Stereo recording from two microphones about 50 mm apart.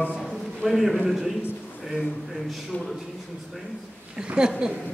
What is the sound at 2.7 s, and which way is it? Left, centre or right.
Speech, left.